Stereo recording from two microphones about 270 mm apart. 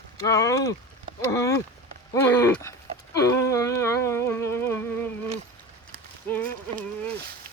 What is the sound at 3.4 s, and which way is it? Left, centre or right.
Music, centre.